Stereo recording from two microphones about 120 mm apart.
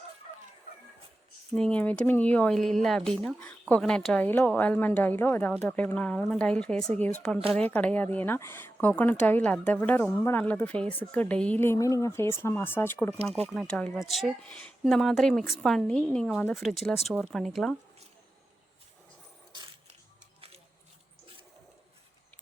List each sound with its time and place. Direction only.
1.5 s a woman's voice: 10° left (ahead or behind)
13.5 s a woman's voice: 5° left (ahead or behind)
19.5 s a sound: 40° right (ahead or behind)